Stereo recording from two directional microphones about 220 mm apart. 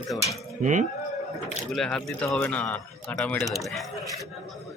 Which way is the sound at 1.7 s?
5° left (ahead or behind).